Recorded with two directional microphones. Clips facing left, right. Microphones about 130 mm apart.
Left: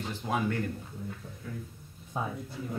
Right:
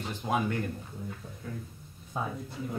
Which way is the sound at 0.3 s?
20° right (ahead or behind).